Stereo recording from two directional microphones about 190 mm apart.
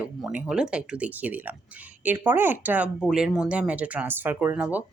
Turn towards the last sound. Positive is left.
turn(degrees=-10)  # may be behind; listen again after turning